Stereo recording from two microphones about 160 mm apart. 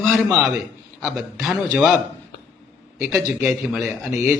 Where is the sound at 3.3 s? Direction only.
5° right (ahead or behind).